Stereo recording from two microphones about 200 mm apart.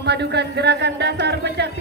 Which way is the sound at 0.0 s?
55° right (ahead or behind).